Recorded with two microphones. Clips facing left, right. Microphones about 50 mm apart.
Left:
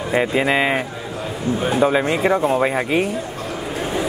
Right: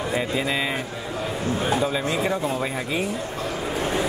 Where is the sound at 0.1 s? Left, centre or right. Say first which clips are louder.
Left 9 dB; left.